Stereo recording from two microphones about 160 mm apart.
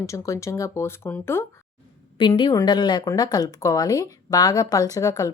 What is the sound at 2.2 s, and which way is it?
A woman's voice, 30° left (ahead or behind).